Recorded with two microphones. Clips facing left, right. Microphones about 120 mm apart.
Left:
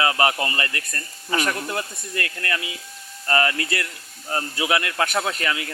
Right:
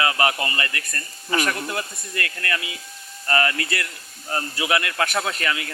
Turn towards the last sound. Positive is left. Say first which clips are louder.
# even
turn(degrees=15)  # may be behind; listen again after turning